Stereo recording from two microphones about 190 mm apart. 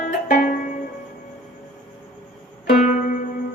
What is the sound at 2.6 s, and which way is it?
Music, 45° left (ahead or behind).